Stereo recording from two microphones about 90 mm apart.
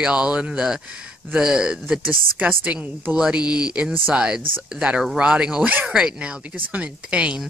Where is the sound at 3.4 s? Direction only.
50° left (ahead or behind).